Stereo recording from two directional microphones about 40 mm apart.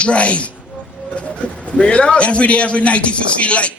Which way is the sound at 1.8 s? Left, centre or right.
Left.